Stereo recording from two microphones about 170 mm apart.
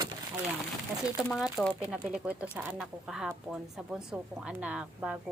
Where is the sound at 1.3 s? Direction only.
5° right (ahead or behind).